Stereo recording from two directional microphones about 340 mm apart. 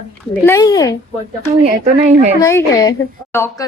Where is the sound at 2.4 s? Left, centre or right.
Centre.